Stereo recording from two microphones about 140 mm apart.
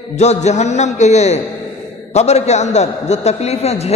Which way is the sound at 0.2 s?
55° left (ahead or behind).